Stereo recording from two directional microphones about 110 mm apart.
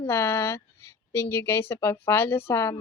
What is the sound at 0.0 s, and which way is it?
Speech, 25° left (ahead or behind).